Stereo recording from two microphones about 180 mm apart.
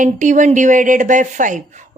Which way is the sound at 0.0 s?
45° right (ahead or behind).